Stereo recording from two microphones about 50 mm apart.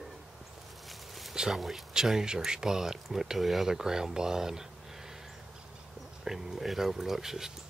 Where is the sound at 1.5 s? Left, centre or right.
Centre.